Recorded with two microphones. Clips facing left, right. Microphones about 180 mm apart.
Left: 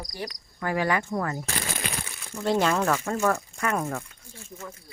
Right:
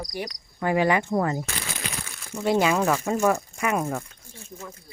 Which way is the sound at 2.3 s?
10° right (ahead or behind).